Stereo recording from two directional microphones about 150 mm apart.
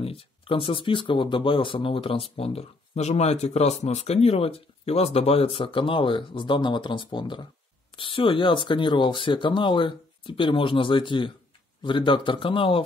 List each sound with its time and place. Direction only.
0.0 s speech: 40° left (ahead or behind)